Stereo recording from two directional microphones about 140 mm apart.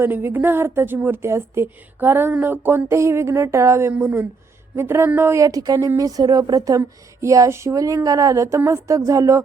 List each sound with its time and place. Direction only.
0.0 s a woman's voice: 15° right (ahead or behind)